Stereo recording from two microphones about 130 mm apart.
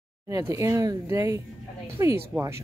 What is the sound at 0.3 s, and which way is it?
Speech, 25° right (ahead or behind).